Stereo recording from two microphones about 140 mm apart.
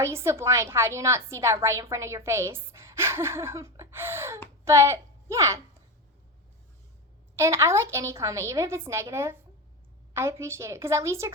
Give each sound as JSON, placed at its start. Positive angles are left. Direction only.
{"t": 0.0, "sound": "a woman's voice", "side_deg": -20}
{"t": 7.3, "sound": "a woman's voice", "side_deg": -20}